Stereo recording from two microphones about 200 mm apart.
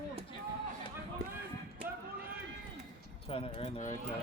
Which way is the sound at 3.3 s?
35° left (ahead or behind).